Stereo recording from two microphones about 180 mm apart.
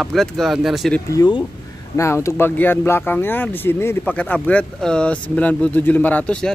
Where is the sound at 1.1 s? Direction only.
20° left (ahead or behind).